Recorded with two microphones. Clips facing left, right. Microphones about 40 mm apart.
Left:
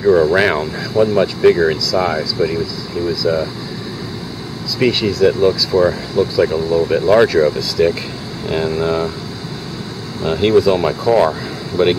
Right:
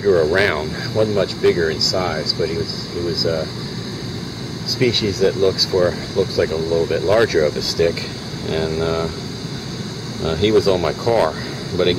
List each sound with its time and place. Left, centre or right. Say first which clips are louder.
0.0 s speech: left 3 dB; centre
3.2 s speech: left 5 dB; left
4.7 s speech: left 3 dB; centre
10.2 s speech: left 3 dB; centre